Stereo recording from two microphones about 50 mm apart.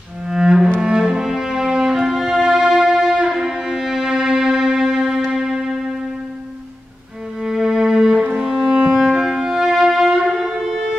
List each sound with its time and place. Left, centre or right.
0.3 s music: centre
7.4 s music: centre